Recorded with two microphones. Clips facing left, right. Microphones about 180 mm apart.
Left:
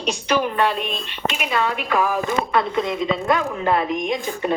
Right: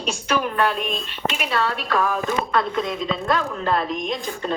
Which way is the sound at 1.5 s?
10° left (ahead or behind).